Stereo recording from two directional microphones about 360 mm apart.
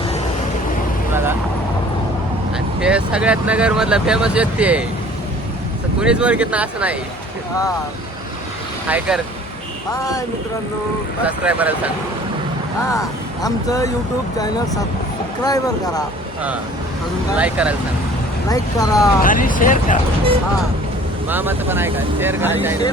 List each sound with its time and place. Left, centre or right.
1.1 s vehicle: centre
2.8 s speech: centre
6.0 s speech: centre
8.9 s speech: centre
9.9 s speech: centre
11.3 s speech: centre
12.8 s speech: centre
17.3 s speech: centre
18.4 s speech: centre
19.2 s speech: left
21.2 s speech: centre